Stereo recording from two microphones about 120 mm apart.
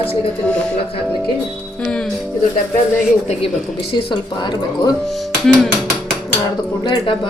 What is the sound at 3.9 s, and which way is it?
Speech, 40° left (ahead or behind).